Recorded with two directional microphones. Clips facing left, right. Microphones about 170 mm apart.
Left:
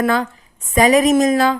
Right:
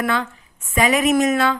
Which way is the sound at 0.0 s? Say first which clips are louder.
Left 5 dB; 40° left (ahead or behind).